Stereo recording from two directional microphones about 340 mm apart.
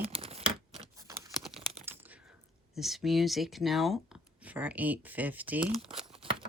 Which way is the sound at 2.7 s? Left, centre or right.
Centre.